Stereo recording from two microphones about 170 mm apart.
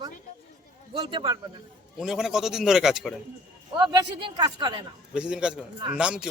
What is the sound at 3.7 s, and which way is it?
Speech, 25° right (ahead or behind).